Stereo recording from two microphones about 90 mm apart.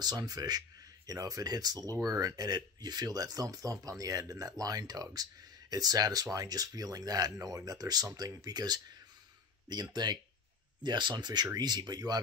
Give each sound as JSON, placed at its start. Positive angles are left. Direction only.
{"t": 0.0, "sound": "speech", "side_deg": -45}